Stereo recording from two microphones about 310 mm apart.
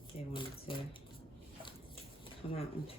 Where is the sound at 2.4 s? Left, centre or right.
Centre.